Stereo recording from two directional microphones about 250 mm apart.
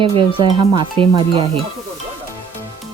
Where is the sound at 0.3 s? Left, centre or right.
Centre.